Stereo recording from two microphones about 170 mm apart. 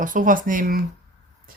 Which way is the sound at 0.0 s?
50° right (ahead or behind).